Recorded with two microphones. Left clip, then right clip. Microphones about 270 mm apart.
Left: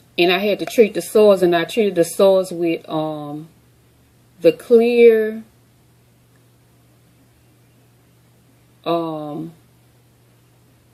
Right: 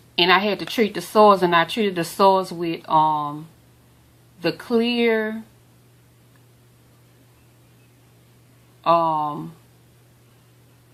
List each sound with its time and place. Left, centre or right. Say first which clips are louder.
0.2 s speech: left 1 dB; centre
4.4 s speech: left 9 dB; centre
8.8 s speech: right 4 dB; centre